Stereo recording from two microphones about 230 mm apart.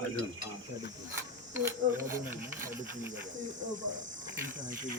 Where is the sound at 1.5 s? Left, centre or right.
Centre.